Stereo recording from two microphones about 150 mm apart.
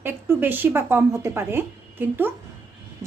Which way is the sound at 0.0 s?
15° right (ahead or behind).